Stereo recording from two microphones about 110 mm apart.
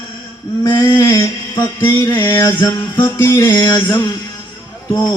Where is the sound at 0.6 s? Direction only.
30° left (ahead or behind).